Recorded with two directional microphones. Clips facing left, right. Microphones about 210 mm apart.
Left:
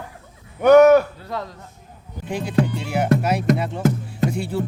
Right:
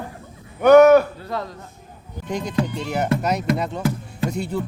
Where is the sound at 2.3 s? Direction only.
10° left (ahead or behind).